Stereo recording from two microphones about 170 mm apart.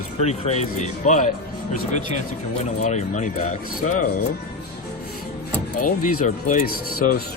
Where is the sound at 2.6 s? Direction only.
45° left (ahead or behind).